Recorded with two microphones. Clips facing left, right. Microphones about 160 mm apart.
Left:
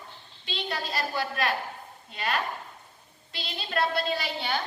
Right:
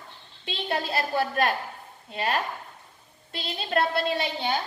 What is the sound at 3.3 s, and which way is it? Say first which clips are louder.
Speech: right 4 dB; 50° right (ahead or behind).